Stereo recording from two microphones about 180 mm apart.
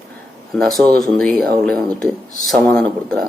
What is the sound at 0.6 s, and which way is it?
Speech, centre (ahead or behind).